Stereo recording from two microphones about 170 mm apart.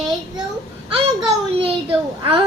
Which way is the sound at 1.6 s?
30° right (ahead or behind).